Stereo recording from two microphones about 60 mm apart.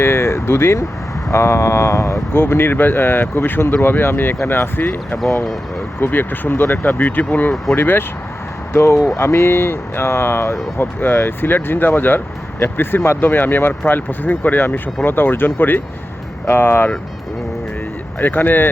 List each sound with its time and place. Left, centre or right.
0.0 s speech: left
2.3 s speech: left
18.2 s speech: left